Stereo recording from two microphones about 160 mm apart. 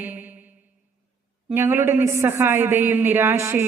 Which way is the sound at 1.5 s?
15° right (ahead or behind).